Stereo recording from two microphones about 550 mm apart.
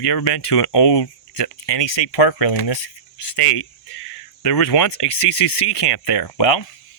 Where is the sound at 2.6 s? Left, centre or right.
Left.